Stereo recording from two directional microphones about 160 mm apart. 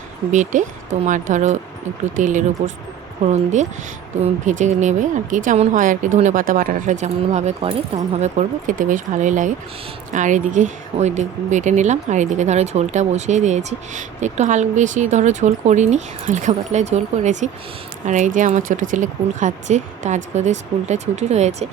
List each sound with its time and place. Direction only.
0.3 s speech: 50° right (ahead or behind)